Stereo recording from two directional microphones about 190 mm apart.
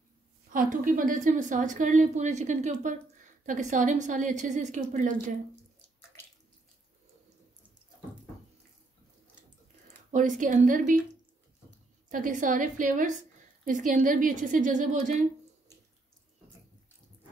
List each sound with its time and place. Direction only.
0.5 s a woman's voice: 45° right (ahead or behind)
10.1 s a woman's voice: 40° right (ahead or behind)
12.1 s a woman's voice: 45° right (ahead or behind)